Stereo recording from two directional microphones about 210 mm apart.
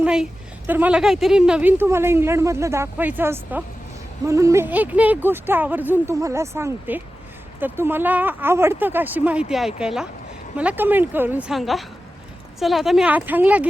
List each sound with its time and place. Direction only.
0.0 s a woman's voice: 5° right (ahead or behind)